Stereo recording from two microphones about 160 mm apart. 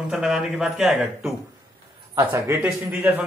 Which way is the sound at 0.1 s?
5° right (ahead or behind).